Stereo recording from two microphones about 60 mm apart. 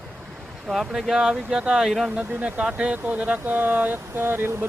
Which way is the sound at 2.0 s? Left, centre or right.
Centre.